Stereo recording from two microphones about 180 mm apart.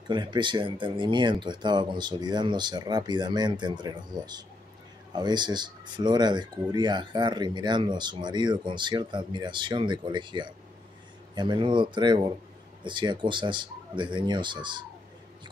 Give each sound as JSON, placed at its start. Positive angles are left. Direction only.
{"t": 0.1, "sound": "speech", "side_deg": -25}